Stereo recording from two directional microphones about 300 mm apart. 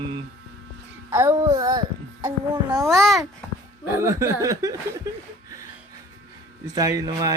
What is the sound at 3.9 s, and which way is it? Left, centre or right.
Speech, centre.